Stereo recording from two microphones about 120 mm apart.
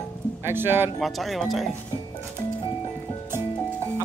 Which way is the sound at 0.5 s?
20° right (ahead or behind).